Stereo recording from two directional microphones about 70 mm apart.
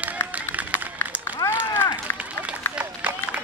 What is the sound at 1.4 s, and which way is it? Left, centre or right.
Run, left.